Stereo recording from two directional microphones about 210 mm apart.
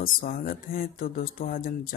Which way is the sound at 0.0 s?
45° left (ahead or behind).